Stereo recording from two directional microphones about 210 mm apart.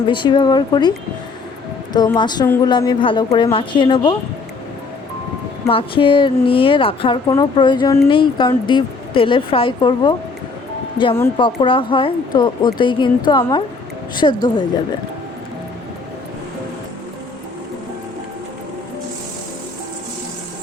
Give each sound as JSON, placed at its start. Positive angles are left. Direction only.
{"t": 0.1, "sound": "speech", "side_deg": 20}
{"t": 5.6, "sound": "speech", "side_deg": 25}